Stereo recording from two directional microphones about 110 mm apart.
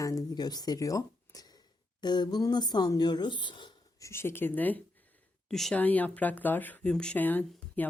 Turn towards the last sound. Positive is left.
turn(degrees=15)  # may be behind; listen again after turning